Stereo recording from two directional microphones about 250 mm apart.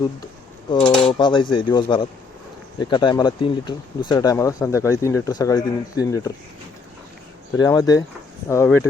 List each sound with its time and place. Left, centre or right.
0.8 s cutlery: centre
1.1 s speech: centre
7.6 s speech: centre